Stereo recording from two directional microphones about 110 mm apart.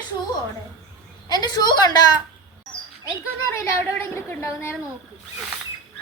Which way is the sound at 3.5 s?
25° left (ahead or behind).